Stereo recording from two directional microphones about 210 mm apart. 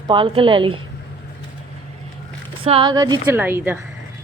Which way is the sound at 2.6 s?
25° right (ahead or behind).